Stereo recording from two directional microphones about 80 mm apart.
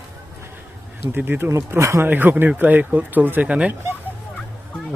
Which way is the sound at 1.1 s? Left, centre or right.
Right.